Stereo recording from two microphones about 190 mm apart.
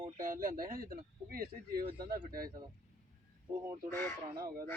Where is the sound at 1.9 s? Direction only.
20° right (ahead or behind).